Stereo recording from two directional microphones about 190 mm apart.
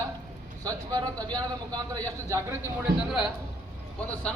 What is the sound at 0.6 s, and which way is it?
Speech, 20° right (ahead or behind).